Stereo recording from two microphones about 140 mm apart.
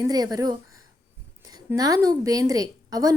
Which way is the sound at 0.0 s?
30° right (ahead or behind).